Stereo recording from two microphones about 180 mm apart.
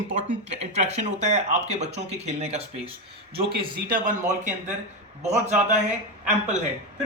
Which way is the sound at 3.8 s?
50° right (ahead or behind).